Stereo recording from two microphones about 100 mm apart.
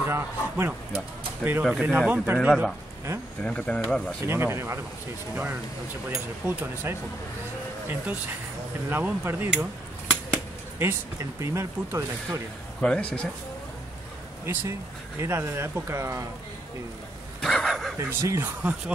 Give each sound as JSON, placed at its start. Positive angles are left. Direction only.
{"t": 0.0, "sound": "speech", "side_deg": -25}
{"t": 2.3, "sound": "a man's voice", "side_deg": -5}
{"t": 3.4, "sound": "speech", "side_deg": 10}
{"t": 4.3, "sound": "speech", "side_deg": -25}
{"t": 10.8, "sound": "speech", "side_deg": -30}
{"t": 12.8, "sound": "speech", "side_deg": 10}
{"t": 14.4, "sound": "speech", "side_deg": -25}
{"t": 17.4, "sound": "vehicle", "side_deg": 5}
{"t": 17.9, "sound": "speech", "side_deg": -25}